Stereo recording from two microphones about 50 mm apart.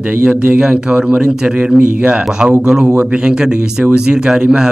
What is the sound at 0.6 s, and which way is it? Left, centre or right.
A man's voice, centre.